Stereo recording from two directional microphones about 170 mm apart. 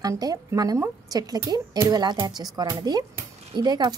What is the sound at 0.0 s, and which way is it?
Speech, 20° right (ahead or behind).